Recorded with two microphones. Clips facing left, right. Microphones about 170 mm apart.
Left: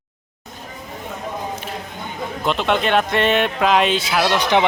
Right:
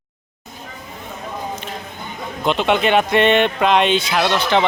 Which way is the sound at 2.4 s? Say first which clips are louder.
Right 3 dB; centre (ahead or behind).